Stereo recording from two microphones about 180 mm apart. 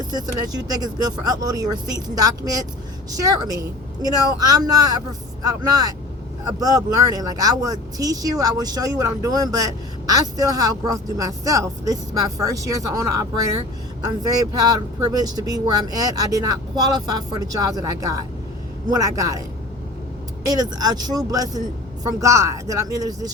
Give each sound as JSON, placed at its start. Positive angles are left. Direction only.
{"t": 0.1, "sound": "speech", "side_deg": -20}
{"t": 3.1, "sound": "speech", "side_deg": -20}
{"t": 20.4, "sound": "speech", "side_deg": -20}